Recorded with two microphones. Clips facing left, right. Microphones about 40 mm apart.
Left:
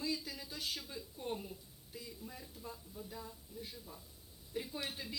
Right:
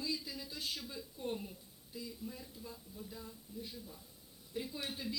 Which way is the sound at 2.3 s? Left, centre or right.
Left.